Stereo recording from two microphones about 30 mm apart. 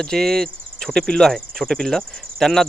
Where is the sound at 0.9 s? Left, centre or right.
Left.